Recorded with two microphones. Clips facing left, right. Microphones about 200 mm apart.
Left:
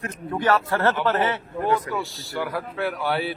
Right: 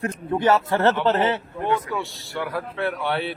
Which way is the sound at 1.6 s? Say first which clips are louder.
Left 1 dB; 35° left (ahead or behind).